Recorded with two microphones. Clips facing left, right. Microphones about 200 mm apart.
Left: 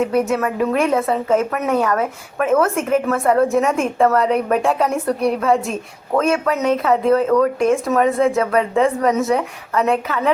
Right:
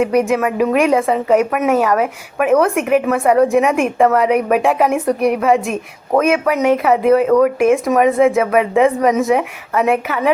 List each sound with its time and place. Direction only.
0.1 s a woman's voice: 15° right (ahead or behind)